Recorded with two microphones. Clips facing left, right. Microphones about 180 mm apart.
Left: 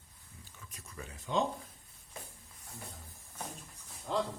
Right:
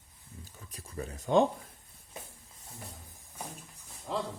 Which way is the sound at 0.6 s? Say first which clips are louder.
Right 8 dB; 35° right (ahead or behind).